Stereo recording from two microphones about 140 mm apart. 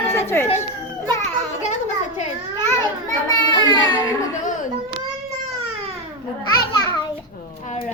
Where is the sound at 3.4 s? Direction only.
30° left (ahead or behind).